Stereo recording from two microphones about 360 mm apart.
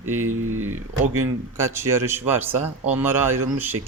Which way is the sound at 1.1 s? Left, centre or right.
Centre.